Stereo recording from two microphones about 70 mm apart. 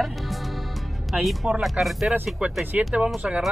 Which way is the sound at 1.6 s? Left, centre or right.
Centre.